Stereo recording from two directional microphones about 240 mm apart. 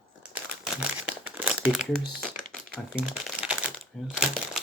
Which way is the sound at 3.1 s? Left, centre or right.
Centre.